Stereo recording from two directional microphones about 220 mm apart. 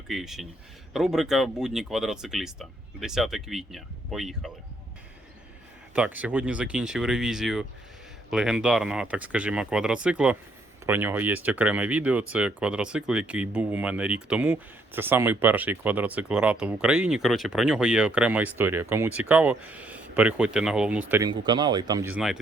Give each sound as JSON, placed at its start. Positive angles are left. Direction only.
{"t": 0.1, "sound": "speech", "side_deg": 0}
{"t": 5.9, "sound": "speech", "side_deg": -5}
{"t": 21.2, "sound": "speech", "side_deg": -20}